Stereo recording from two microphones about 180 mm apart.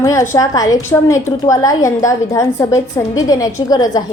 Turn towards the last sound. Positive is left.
turn(degrees=20)  # may be behind; listen again after turning